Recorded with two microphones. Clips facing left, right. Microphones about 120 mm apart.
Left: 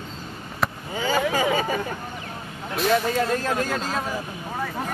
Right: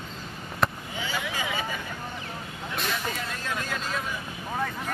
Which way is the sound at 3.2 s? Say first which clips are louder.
Left 9 dB; 40° left (ahead or behind).